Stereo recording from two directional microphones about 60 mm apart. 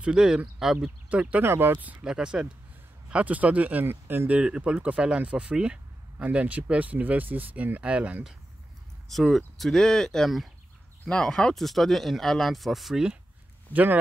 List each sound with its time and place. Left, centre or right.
0.0 s speech: centre
1.4 s speech: right
2.0 s speech: centre
3.1 s speech: right
3.8 s speech: right
4.3 s speech: centre
9.1 s speech: centre
13.7 s speech: left